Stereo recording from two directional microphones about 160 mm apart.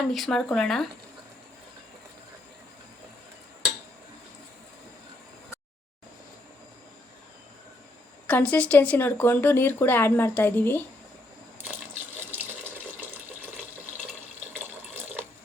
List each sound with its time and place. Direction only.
0.1 s speech: centre (ahead or behind)
8.3 s a woman's voice: 10° left (ahead or behind)
11.6 s water: 15° right (ahead or behind)
14.5 s water: 15° right (ahead or behind)